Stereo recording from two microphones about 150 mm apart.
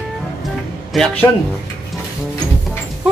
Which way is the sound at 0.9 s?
5° left (ahead or behind).